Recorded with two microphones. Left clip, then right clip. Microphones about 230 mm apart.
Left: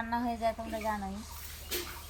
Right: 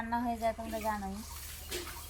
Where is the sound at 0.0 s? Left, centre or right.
Centre.